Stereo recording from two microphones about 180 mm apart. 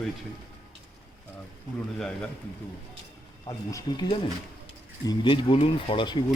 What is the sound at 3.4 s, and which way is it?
Speech, 20° left (ahead or behind).